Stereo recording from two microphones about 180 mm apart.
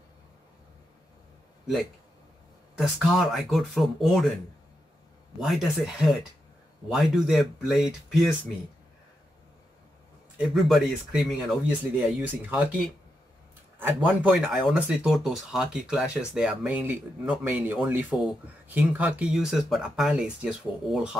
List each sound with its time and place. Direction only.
2.8 s speech: centre (ahead or behind)
5.4 s speech: centre (ahead or behind)
10.3 s speech: centre (ahead or behind)
14.0 s speech: 5° right (ahead or behind)